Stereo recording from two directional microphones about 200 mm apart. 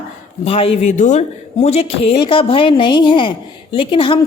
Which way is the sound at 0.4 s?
30° left (ahead or behind).